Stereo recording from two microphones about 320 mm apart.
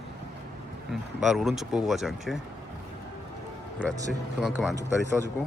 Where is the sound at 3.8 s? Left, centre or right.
Centre.